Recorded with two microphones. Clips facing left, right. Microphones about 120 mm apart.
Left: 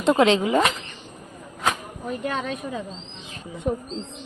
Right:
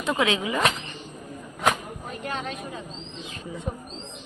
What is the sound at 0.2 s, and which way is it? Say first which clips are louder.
Speech: left 7 dB; 35° left (ahead or behind).